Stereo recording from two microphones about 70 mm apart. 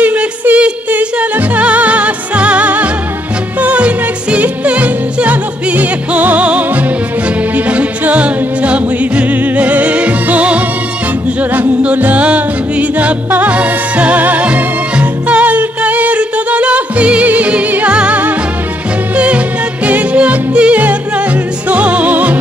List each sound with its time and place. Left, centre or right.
0.0 s music: right